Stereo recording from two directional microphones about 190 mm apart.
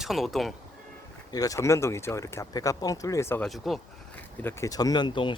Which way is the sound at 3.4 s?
Centre (ahead or behind).